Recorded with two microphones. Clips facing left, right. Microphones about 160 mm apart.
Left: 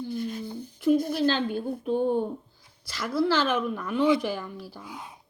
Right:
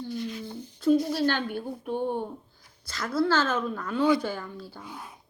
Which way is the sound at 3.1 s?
15° left (ahead or behind).